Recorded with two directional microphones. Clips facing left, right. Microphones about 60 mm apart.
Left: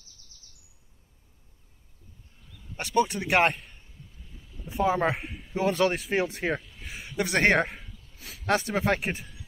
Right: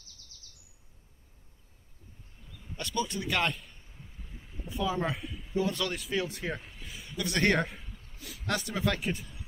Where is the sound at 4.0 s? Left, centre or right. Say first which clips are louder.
Right 3 dB; right.